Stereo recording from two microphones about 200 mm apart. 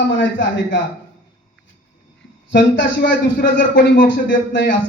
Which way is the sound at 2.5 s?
65° left (ahead or behind).